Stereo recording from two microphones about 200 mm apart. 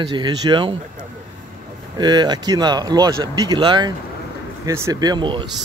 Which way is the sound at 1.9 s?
20° right (ahead or behind).